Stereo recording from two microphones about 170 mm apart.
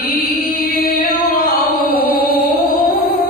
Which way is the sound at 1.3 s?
60° left (ahead or behind).